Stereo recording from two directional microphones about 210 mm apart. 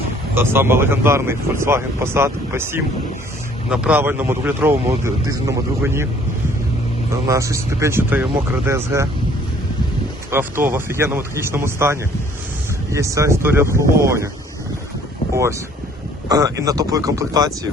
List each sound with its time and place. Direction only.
0.3 s speech: 10° right (ahead or behind)
7.1 s speech: 15° right (ahead or behind)
10.3 s speech: 10° right (ahead or behind)
16.3 s speech: 15° right (ahead or behind)